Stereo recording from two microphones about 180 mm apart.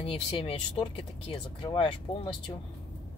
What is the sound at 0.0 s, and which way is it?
Speech, 30° left (ahead or behind).